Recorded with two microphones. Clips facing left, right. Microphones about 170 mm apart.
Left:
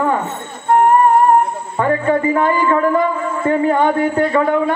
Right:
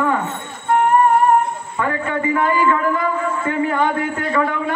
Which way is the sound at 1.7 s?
35° left (ahead or behind).